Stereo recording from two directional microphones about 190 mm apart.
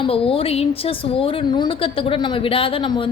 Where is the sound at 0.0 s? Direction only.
30° left (ahead or behind).